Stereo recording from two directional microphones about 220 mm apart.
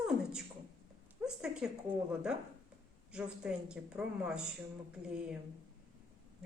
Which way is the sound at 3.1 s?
5° right (ahead or behind).